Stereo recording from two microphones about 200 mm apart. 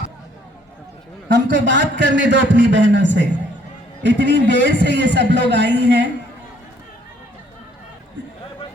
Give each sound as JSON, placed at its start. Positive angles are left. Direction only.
{"t": 1.3, "sound": "a man's voice", "side_deg": -60}